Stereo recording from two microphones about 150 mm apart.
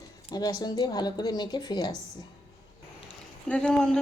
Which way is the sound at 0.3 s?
25° left (ahead or behind).